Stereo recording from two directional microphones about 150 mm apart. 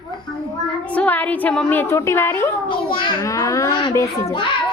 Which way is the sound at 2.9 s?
35° left (ahead or behind).